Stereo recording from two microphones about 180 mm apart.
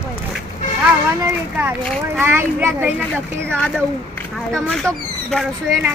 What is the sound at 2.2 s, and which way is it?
Speech, 15° right (ahead or behind).